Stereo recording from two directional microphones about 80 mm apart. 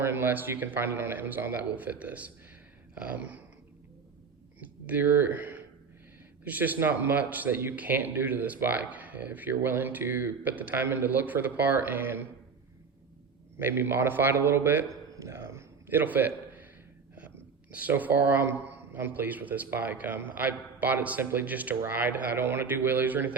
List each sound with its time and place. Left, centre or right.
0.0 s speech: right
4.6 s speech: right
13.6 s speech: right
15.1 s a sound: right
17.7 s speech: right